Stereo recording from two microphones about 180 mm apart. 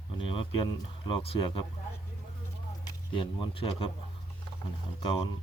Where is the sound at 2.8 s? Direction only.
25° left (ahead or behind).